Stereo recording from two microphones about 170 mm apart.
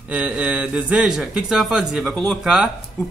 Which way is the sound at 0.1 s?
10° right (ahead or behind).